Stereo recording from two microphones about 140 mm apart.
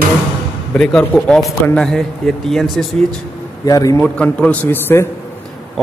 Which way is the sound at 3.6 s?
25° left (ahead or behind).